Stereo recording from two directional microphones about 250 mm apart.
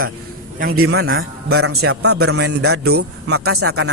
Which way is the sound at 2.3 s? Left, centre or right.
Right.